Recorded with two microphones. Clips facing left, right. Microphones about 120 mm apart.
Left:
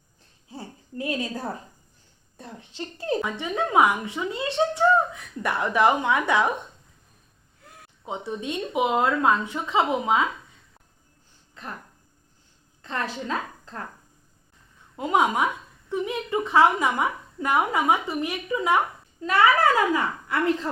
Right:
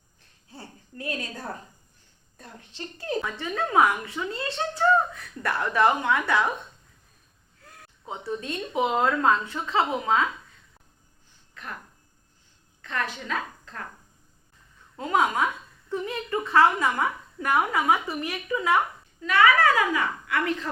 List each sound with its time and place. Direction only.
0.5 s a sound: 20° left (ahead or behind)
2.4 s a woman's voice: 25° left (ahead or behind)
3.2 s a woman's voice: 15° left (ahead or behind)
7.6 s a woman's voice: 15° left (ahead or behind)
12.8 s a woman's voice: 30° left (ahead or behind)
14.9 s a woman's voice: 15° left (ahead or behind)
19.9 s a woman's voice: 30° left (ahead or behind)